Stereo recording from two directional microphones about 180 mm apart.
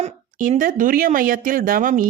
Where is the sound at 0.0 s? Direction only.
45° right (ahead or behind).